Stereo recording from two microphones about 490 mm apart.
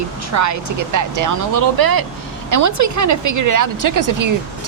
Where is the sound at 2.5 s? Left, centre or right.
Right.